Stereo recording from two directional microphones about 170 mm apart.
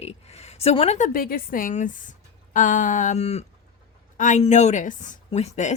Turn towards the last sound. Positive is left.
turn(degrees=40)  # may be behind; listen again after turning